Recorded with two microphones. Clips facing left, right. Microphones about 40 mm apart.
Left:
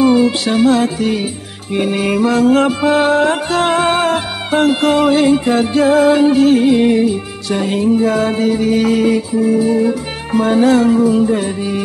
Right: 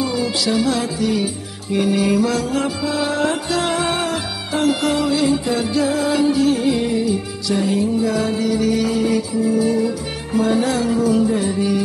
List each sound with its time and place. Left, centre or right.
0.0 s music: left
9.6 s music: left
9.8 s music: left
11.2 s music: left